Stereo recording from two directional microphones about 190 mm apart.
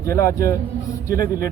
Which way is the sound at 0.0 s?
15° left (ahead or behind).